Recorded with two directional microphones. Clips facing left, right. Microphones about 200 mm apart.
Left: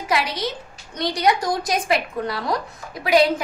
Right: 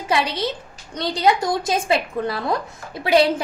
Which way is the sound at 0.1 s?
25° right (ahead or behind).